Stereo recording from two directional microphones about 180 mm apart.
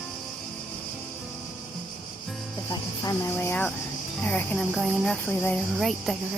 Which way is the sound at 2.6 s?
20° left (ahead or behind).